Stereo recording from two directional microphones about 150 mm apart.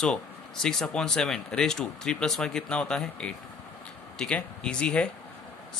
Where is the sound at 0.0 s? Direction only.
5° left (ahead or behind).